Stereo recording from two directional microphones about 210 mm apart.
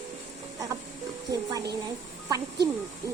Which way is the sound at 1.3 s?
15° right (ahead or behind).